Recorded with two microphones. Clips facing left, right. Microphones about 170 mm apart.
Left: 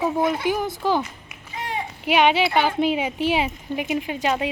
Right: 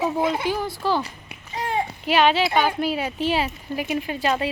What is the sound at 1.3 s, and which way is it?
Babbling, 35° right (ahead or behind).